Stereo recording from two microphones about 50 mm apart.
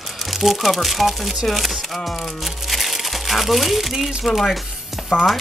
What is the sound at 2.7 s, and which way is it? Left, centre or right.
Speech, centre.